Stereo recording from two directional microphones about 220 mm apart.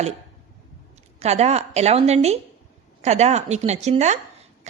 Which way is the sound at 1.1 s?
30° right (ahead or behind).